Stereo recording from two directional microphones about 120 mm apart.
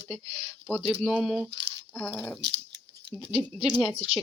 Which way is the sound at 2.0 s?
15° left (ahead or behind).